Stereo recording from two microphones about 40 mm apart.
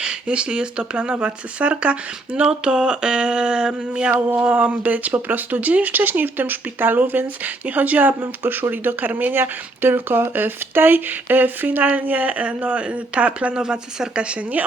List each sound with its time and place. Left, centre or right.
0.0 s speech: right
2.4 s speech: right
4.1 s speech: right
4.4 s speech: right
8.2 s speech: right
9.4 s speech: right
13.6 s speech: right